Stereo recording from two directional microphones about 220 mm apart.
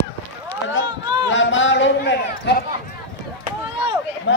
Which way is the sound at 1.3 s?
60° left (ahead or behind).